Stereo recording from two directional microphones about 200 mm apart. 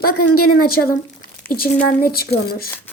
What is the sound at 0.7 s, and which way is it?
A child's voice, 45° left (ahead or behind).